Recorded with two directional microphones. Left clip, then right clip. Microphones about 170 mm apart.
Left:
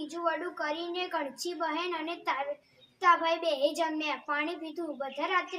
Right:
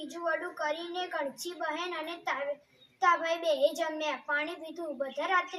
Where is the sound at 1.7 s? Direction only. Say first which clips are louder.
Left 2 dB; 10° left (ahead or behind).